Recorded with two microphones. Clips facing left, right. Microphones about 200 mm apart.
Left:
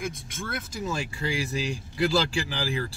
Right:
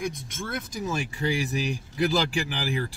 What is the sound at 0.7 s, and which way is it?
Speech, 15° right (ahead or behind).